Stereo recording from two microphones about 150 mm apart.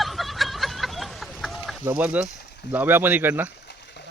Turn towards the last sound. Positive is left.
turn(degrees=-15)  # may be behind; listen again after turning